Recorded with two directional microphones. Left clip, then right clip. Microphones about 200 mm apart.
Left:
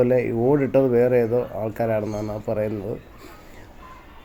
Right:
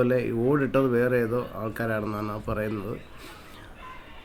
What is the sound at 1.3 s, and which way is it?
Speech, 30° right (ahead or behind).